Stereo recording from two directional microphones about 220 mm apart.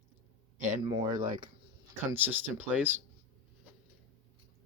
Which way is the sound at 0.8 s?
20° right (ahead or behind).